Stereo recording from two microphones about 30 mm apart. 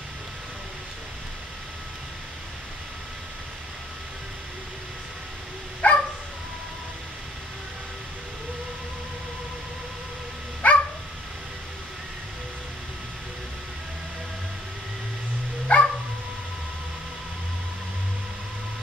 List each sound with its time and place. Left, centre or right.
5.8 s dog: left
10.6 s dog: left
15.7 s dog: left